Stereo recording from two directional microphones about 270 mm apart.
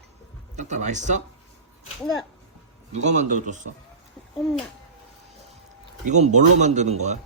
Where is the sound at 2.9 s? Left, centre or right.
Right.